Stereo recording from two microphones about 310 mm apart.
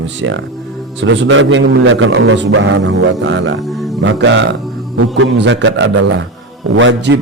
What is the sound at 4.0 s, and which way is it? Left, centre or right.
A man's voice, right.